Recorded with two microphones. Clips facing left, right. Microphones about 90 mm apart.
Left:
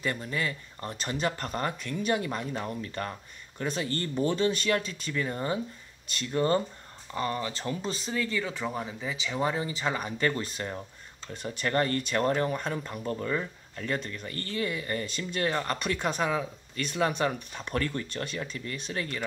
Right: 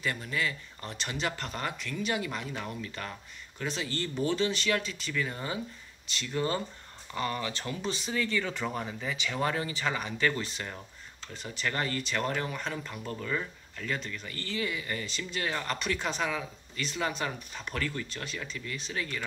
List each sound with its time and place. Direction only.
0.0 s speech: 35° left (ahead or behind)
3.6 s speech: 45° left (ahead or behind)
7.2 s speech: 25° left (ahead or behind)
8.0 s speech: 5° left (ahead or behind)
9.7 s speech: 30° left (ahead or behind)
11.4 s speech: 45° left (ahead or behind)
13.9 s speech: 45° left (ahead or behind)